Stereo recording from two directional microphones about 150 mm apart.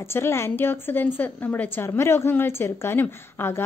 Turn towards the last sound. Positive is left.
turn(degrees=15)  # may be behind; listen again after turning